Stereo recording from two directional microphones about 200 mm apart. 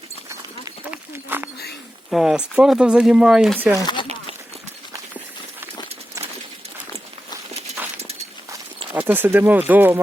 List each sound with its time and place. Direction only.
0.3 s run: 15° right (ahead or behind)
2.0 s speech: centre (ahead or behind)
3.8 s speech: 20° left (ahead or behind)
7.9 s a sound: 30° right (ahead or behind)
8.9 s speech: 10° right (ahead or behind)